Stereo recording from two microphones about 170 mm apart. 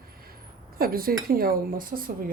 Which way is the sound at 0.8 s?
60° right (ahead or behind).